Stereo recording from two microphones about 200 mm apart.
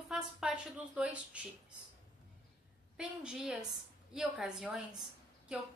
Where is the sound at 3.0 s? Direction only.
5° right (ahead or behind).